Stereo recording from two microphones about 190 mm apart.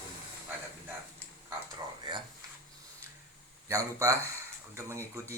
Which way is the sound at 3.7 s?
15° right (ahead or behind).